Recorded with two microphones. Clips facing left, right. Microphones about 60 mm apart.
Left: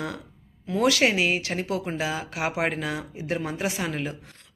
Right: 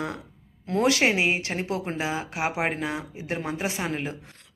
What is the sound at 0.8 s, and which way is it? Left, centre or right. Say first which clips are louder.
Speech: even; right.